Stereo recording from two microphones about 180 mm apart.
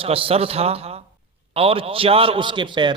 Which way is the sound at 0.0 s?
30° right (ahead or behind).